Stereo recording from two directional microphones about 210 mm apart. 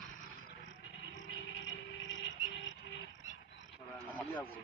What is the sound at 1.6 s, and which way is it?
Music, 65° left (ahead or behind).